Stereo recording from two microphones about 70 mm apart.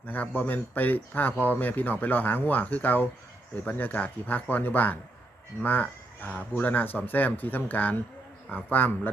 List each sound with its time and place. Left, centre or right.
0.1 s a man's voice: left